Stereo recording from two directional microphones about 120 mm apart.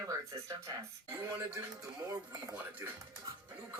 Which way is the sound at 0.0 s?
25° right (ahead or behind).